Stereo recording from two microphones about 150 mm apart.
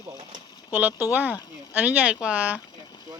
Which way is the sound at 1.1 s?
10° right (ahead or behind).